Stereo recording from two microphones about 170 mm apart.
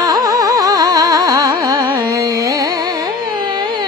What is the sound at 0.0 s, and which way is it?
Music, 20° right (ahead or behind).